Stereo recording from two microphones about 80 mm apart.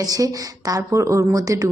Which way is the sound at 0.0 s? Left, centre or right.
Right.